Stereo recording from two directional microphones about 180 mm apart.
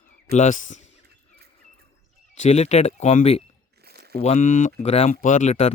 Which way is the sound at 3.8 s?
60° right (ahead or behind).